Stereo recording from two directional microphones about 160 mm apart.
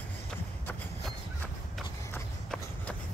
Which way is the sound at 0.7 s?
10° left (ahead or behind).